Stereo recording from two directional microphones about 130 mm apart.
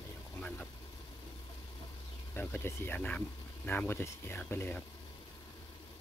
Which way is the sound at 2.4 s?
15° left (ahead or behind).